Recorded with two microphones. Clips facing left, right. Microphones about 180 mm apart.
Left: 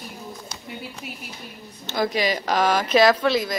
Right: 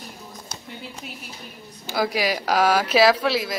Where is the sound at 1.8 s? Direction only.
10° right (ahead or behind).